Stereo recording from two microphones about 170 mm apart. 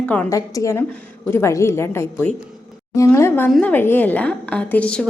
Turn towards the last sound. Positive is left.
turn(degrees=5)  # may be behind; listen again after turning